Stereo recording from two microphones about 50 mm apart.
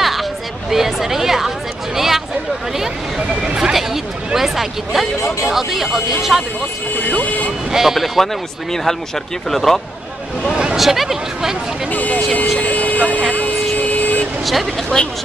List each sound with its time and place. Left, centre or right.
0.0 s a sound: centre
3.4 s a sound: centre
5.4 s speech: centre
7.1 s speech: left
7.7 s speech: centre
9.5 s speech: centre
10.8 s speech: centre
11.9 s speech: left
12.5 s vehicle: left
14.4 s speech: centre